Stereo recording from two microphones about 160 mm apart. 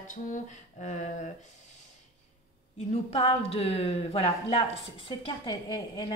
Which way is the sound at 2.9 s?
40° left (ahead or behind).